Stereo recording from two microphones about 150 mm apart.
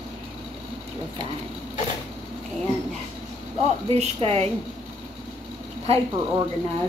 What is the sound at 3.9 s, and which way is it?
Speech, 45° right (ahead or behind).